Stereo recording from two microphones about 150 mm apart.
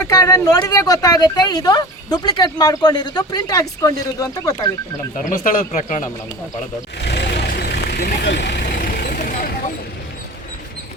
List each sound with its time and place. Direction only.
0.0 s speech: 25° left (ahead or behind)
5.3 s speech: 60° left (ahead or behind)
7.2 s vehicle: 90° left
8.5 s vehicle: 65° left (ahead or behind)